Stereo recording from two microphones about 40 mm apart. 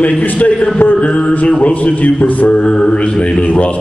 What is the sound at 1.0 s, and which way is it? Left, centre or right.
Mantra, left.